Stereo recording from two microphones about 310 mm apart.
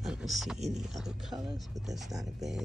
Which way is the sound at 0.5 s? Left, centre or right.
Right.